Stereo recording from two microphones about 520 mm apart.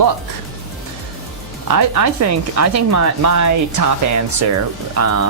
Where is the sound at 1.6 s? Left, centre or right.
Right.